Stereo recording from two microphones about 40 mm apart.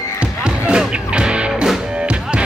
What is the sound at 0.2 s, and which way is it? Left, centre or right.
Music, right.